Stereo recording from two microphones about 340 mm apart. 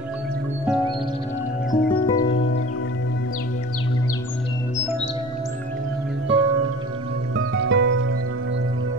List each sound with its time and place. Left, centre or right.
1.7 s music: centre
2.2 s music: left
6.2 s music: right